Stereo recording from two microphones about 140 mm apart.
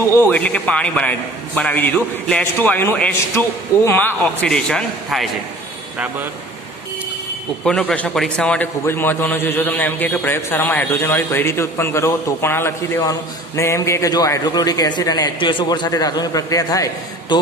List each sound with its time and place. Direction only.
0.3 s a man's voice: 10° left (ahead or behind)
7.6 s a man's voice: 5° left (ahead or behind); by 17.4 s 25° left (ahead or behind)